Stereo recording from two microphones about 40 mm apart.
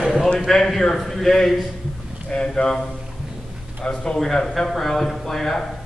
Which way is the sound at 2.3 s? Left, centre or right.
Left.